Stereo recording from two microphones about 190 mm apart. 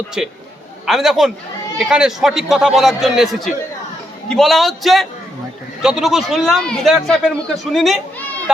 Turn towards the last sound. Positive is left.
turn(degrees=0)  # may be behind; listen again after turning